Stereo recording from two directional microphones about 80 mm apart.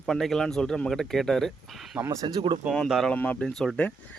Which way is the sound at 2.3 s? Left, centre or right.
Right.